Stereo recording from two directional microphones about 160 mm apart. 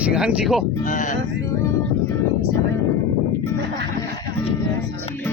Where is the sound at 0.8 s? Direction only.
50° left (ahead or behind).